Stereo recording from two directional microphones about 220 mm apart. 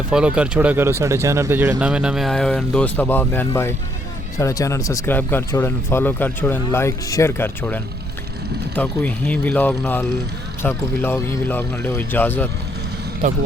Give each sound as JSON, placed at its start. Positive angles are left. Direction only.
{"t": 0.1, "sound": "speech", "side_deg": -5}
{"t": 13.2, "sound": "speech", "side_deg": -30}